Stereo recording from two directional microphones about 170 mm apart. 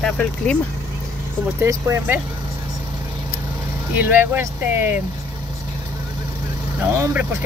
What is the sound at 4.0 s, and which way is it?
Speech, 10° right (ahead or behind).